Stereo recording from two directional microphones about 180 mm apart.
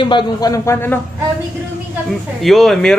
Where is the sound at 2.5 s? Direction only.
Centre (ahead or behind).